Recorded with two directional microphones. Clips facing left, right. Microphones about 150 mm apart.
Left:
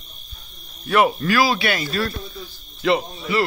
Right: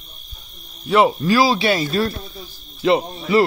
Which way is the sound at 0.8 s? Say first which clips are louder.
Right 2 dB; 20° right (ahead or behind).